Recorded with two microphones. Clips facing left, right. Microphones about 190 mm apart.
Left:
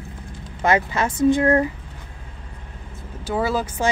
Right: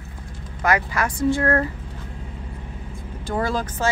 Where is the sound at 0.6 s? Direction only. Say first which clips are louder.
Left 2 dB; 25° left (ahead or behind).